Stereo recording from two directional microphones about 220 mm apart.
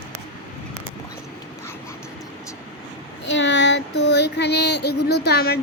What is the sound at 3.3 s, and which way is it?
Child singing, 55° left (ahead or behind).